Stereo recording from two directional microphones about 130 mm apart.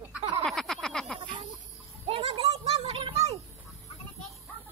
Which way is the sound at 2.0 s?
50° right (ahead or behind).